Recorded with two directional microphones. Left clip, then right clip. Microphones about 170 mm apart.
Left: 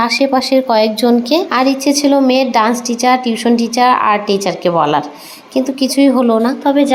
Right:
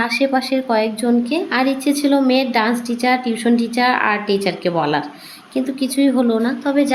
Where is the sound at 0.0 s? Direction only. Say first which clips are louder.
Left 5 dB; 20° left (ahead or behind).